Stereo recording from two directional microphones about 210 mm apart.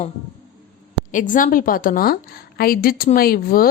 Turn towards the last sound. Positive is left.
turn(degrees=45)  # may be behind; listen again after turning